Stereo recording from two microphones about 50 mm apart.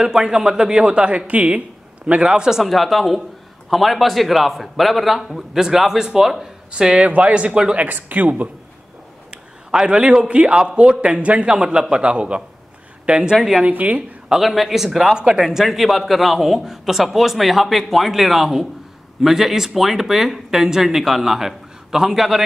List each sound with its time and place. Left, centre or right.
0.0 s speech: centre
2.2 s speech: centre
2.6 s a man's voice: centre
6.7 s a man's voice: centre
7.8 s speech: right
9.3 s a man's voice: centre
13.7 s a man's voice: right
14.3 s a man's voice: centre